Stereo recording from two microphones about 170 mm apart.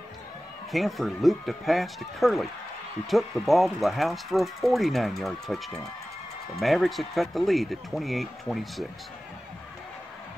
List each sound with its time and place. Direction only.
0.7 s speech: centre (ahead or behind)